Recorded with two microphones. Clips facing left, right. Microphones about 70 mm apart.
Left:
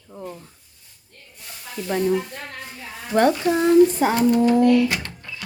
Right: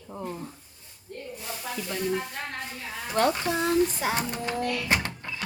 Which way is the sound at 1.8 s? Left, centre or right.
Left.